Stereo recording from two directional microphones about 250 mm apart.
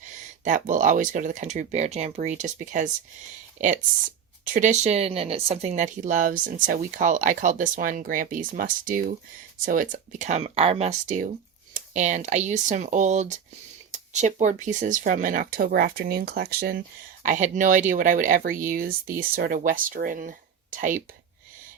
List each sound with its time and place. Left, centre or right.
0.1 s speech: right